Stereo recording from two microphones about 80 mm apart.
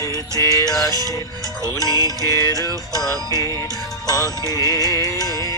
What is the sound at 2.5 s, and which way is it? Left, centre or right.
Music, right.